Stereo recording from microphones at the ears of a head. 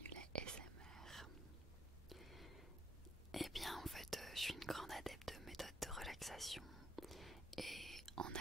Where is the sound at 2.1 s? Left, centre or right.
Centre.